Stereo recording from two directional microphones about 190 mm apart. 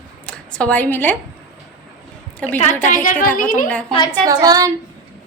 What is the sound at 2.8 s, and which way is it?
Speech, 45° left (ahead or behind).